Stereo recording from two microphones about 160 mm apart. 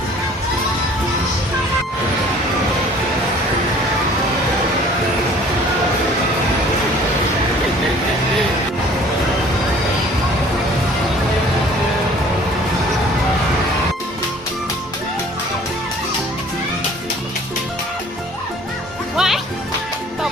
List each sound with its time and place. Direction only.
19.1 s music: 5° right (ahead or behind)